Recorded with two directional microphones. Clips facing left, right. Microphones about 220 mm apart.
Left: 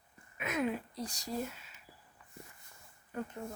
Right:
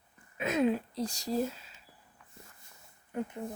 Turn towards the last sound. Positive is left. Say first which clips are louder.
# right 4 dB
turn(degrees=-20)  # may be behind; listen again after turning